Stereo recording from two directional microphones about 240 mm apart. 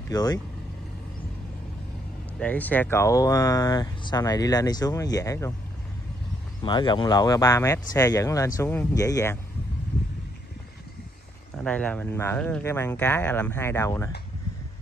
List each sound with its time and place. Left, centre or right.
0.1 s speech: centre
2.3 s speech: centre
6.6 s speech: centre
11.5 s speech: centre